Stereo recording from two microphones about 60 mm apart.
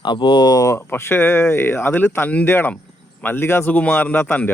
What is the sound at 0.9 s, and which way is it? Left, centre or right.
Speech, left.